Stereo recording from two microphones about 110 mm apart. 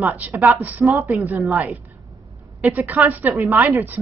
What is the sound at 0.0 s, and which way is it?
A woman's voice, 15° right (ahead or behind).